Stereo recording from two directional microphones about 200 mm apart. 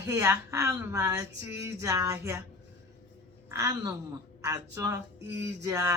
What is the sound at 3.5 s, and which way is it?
A woman's voice, 15° right (ahead or behind).